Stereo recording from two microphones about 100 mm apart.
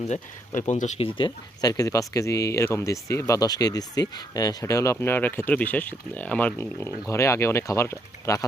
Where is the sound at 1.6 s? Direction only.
40° left (ahead or behind); by 6.5 s 15° left (ahead or behind).